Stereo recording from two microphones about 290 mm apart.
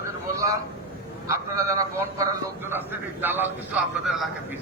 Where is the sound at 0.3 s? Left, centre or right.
Centre.